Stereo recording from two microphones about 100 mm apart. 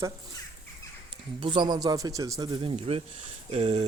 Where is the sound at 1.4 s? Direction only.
55° right (ahead or behind); by 2.5 s 35° right (ahead or behind).